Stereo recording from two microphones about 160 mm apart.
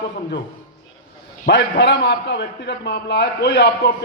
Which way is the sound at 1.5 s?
90° left.